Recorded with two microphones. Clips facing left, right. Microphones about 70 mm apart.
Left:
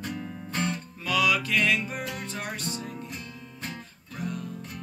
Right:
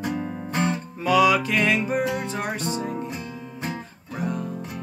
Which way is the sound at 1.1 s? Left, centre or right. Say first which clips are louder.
Right 6 dB; right.